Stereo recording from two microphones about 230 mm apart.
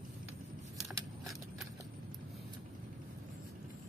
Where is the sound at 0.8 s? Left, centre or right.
Centre.